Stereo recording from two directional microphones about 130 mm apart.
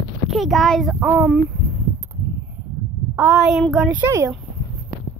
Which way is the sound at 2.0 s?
15° right (ahead or behind).